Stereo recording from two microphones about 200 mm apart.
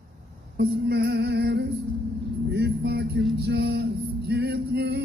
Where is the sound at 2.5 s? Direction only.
55° right (ahead or behind).